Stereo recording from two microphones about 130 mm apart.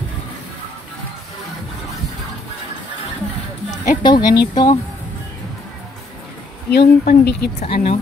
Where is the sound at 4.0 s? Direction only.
35° left (ahead or behind).